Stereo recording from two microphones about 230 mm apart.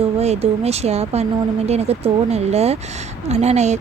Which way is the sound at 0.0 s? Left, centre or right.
Right.